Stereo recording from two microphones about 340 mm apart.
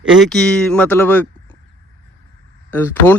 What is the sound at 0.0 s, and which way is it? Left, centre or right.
A man's voice, centre.